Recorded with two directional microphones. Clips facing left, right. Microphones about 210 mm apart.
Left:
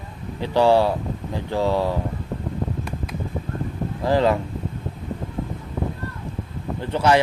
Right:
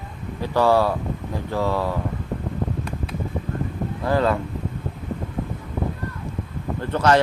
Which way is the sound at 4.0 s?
25° left (ahead or behind).